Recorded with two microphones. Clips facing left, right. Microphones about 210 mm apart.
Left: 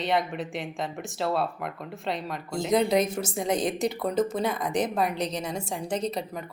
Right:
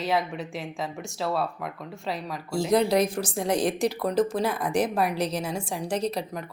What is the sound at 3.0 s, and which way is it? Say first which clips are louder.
Speech: right 2 dB; 25° left (ahead or behind).